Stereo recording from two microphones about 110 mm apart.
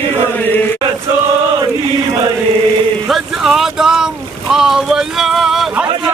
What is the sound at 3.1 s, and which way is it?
Boat, centre (ahead or behind).